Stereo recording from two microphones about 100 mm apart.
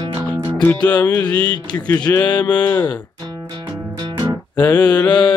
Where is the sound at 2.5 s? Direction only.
15° left (ahead or behind).